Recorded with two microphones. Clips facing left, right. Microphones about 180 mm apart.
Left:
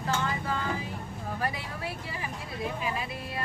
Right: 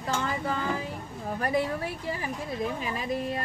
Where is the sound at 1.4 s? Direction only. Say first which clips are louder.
Right 8 dB; 45° right (ahead or behind).